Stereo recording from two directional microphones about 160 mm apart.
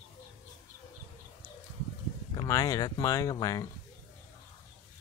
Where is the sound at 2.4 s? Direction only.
20° left (ahead or behind).